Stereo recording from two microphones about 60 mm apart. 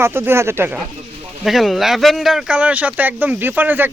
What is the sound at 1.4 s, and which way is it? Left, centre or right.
Speech, centre.